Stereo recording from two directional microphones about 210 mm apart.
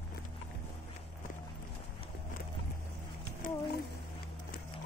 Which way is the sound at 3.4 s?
40° left (ahead or behind).